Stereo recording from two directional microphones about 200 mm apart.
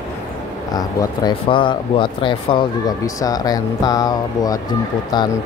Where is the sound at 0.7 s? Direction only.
20° left (ahead or behind).